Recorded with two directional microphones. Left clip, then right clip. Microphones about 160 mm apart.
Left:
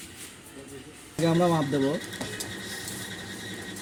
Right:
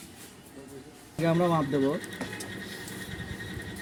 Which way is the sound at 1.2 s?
35° left (ahead or behind).